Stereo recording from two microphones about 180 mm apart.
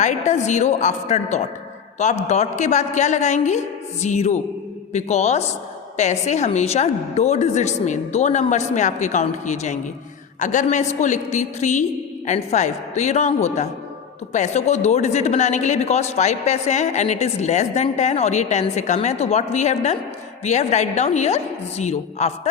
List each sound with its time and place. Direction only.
0.3 s speech: 40° left (ahead or behind)